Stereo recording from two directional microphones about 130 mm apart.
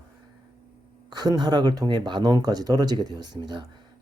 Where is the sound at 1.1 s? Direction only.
30° right (ahead or behind).